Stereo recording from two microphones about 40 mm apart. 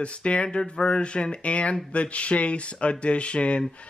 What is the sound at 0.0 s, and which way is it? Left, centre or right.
Speech, left.